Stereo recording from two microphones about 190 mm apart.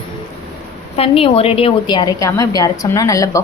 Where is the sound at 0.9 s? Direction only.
30° left (ahead or behind).